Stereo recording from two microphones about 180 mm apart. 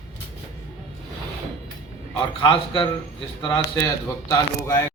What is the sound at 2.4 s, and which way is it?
A man's voice, 25° left (ahead or behind).